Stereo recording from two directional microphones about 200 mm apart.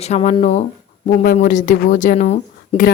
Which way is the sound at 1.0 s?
45° left (ahead or behind).